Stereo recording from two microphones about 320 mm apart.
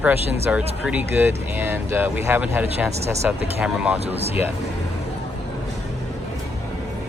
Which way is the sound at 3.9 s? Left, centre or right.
Centre.